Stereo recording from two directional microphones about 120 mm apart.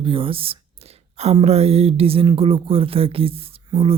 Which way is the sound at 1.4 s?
60° right (ahead or behind).